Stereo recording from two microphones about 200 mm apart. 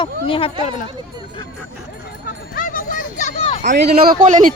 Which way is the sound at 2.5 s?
45° left (ahead or behind).